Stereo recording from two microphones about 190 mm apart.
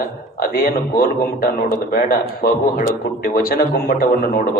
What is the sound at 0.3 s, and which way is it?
Speech, 50° left (ahead or behind).